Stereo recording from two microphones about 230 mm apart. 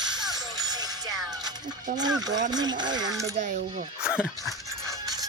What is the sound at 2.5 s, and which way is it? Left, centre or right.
Speech, centre.